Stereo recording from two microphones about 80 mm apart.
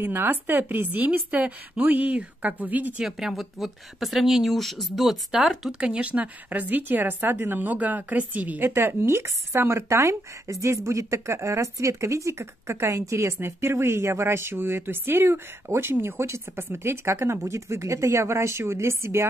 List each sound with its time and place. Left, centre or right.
0.0 s speech: right
3.0 s speech: centre
5.8 s speech: centre; by 19.2 s right